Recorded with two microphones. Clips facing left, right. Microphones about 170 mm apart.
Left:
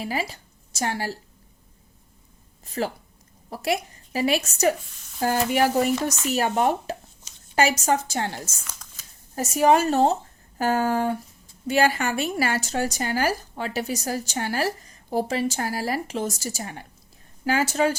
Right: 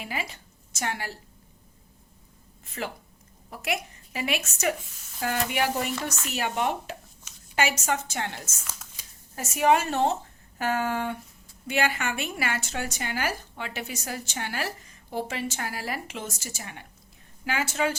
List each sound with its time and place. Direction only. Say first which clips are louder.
0.0 s speech: left 6 dB; 35° left (ahead or behind)
2.6 s a woman's voice: left 7 dB; 35° left (ahead or behind)
4.9 s speech: left 1 dB; 5° right (ahead or behind)
5.2 s a woman's voice: left 6 dB; 40° left (ahead or behind)
8.6 s shuffling cards: even; 5° right (ahead or behind)
9.3 s a woman's voice: left 4 dB; 40° left (ahead or behind)